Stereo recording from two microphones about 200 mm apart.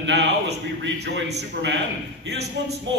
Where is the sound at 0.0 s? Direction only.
60° right (ahead or behind).